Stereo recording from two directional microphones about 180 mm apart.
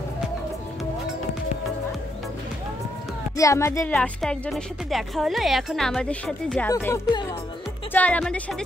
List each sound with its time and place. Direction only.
3.3 s speech: 15° left (ahead or behind)
3.9 s speech: 5° left (ahead or behind)
6.7 s speech: 15° left (ahead or behind)
7.9 s speech: 5° left (ahead or behind)